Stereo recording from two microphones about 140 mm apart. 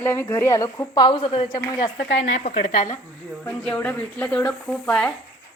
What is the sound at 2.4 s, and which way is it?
Speech, 55° left (ahead or behind).